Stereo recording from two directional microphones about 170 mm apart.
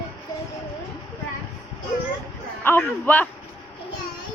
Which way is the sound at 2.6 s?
10° left (ahead or behind).